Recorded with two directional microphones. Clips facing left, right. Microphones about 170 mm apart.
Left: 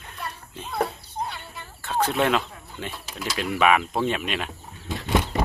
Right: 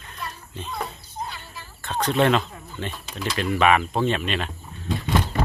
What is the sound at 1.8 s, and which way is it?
Speech, 10° left (ahead or behind).